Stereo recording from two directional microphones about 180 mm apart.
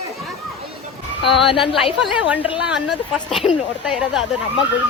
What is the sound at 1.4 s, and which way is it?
Speech, 30° left (ahead or behind).